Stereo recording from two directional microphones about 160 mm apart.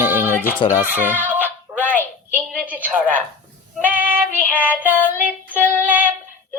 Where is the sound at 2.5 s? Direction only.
Centre (ahead or behind).